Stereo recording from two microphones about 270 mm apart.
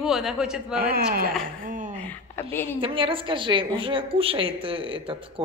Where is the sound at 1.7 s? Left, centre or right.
Right.